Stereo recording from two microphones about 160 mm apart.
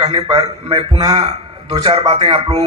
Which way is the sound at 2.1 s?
40° right (ahead or behind).